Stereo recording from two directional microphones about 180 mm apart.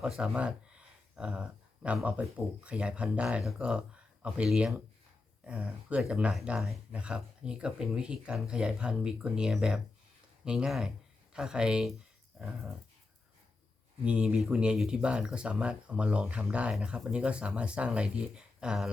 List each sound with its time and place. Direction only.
0.0 s speech: 5° right (ahead or behind)
14.0 s speech: 5° right (ahead or behind)